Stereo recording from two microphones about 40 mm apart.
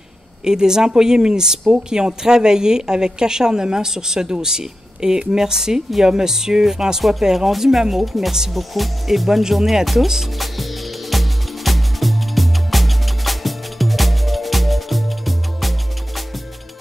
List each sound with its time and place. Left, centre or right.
0.5 s a woman's voice: centre
10.4 s music: centre